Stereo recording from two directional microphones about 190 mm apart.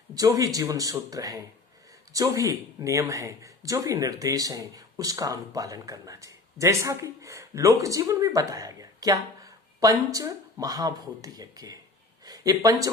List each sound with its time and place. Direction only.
0.1 s speech: 20° right (ahead or behind)